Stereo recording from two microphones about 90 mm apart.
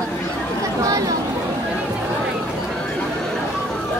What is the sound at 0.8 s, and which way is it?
Chatter, 40° right (ahead or behind).